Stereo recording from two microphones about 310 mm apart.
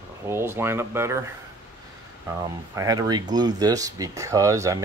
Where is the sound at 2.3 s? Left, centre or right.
Centre.